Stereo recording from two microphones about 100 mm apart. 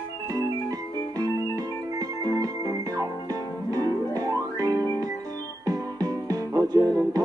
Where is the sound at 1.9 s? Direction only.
40° right (ahead or behind).